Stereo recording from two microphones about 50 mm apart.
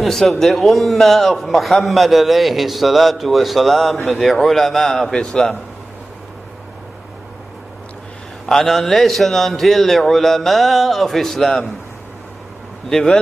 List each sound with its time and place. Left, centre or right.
0.0 s a man's voice: centre
8.5 s a man's voice: centre
12.9 s speech: centre